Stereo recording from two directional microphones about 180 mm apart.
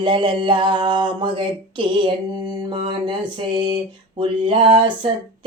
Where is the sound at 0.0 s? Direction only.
25° right (ahead or behind).